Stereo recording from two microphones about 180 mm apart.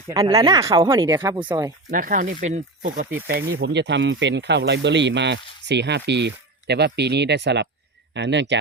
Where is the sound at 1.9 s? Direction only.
50° right (ahead or behind).